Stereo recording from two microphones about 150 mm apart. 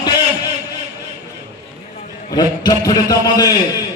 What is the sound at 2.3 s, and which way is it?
A man's voice, 25° left (ahead or behind).